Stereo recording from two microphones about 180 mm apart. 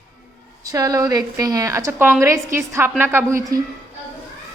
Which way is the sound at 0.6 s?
20° right (ahead or behind).